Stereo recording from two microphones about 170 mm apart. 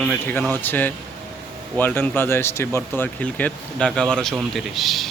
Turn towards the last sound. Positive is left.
turn(degrees=0)  # may be behind; listen again after turning